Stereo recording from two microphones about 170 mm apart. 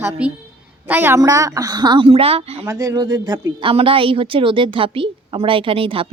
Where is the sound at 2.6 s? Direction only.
20° right (ahead or behind).